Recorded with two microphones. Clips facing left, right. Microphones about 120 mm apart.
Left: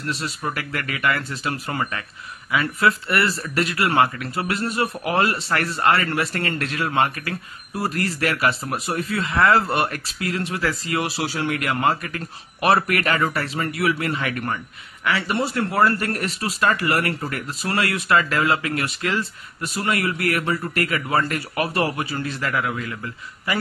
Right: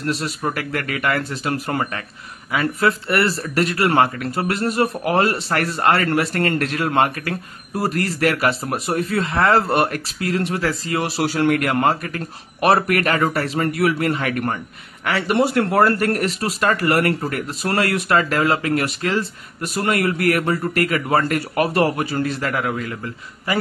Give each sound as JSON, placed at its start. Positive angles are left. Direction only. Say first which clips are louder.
{"t": 0.0, "sound": "speech", "louder": "right 4 dB", "side_deg": -45}
{"t": 11.2, "sound": "speech", "louder": "right 6 dB", "side_deg": -50}
{"t": 19.6, "sound": "speech", "louder": "right 4 dB", "side_deg": -50}